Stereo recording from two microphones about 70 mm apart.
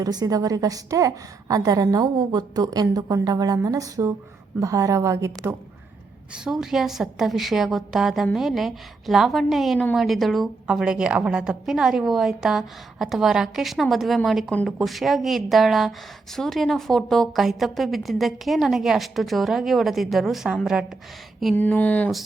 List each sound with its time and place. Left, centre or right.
0.0 s a woman's voice: right
6.3 s a woman's voice: centre
10.7 s a woman's voice: centre
21.5 s a sound: left